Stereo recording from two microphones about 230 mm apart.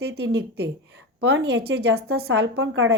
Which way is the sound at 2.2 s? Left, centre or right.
Right.